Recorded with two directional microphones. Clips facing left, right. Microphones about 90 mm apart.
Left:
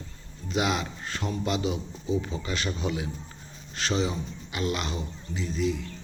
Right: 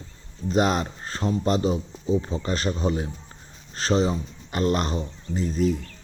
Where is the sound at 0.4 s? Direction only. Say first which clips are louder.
Right 5 dB; 40° right (ahead or behind).